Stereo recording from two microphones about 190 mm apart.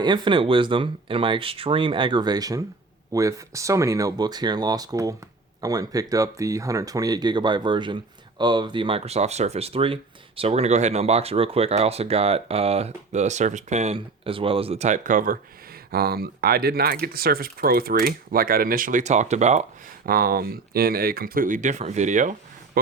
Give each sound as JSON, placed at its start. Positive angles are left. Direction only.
{"t": 0.0, "sound": "speech", "side_deg": -25}
{"t": 20.1, "sound": "speech", "side_deg": -50}